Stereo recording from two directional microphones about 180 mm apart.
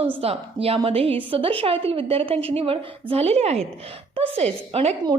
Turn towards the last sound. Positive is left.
turn(degrees=-35)  # may be behind; listen again after turning